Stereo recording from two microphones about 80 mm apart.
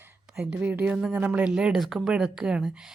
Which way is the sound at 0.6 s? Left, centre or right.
Centre.